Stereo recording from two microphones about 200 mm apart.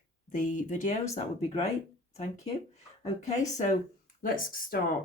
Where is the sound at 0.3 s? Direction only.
40° left (ahead or behind).